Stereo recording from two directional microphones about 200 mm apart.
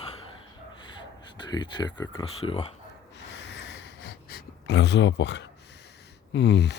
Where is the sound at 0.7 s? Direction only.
25° left (ahead or behind).